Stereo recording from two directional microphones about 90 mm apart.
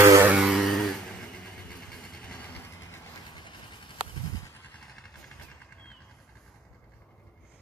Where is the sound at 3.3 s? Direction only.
60° left (ahead or behind).